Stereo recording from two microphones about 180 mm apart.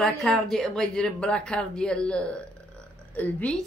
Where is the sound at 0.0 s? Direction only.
Centre (ahead or behind).